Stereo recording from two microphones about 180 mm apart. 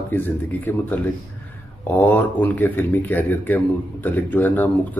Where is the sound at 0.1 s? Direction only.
10° left (ahead or behind).